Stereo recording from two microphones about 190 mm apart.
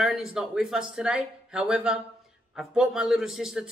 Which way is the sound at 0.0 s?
5° right (ahead or behind).